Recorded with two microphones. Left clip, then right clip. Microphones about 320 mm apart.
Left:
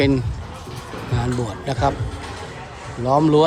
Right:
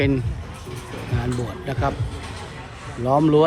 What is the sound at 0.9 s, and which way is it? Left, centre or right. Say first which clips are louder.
Music: left 3 dB; left.